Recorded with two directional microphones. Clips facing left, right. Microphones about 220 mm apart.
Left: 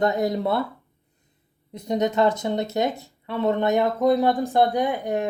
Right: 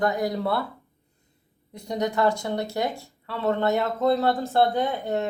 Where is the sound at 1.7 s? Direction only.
20° left (ahead or behind).